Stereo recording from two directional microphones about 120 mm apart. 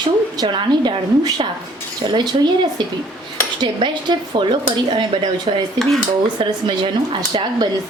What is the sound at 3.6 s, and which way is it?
A woman's voice, 40° right (ahead or behind).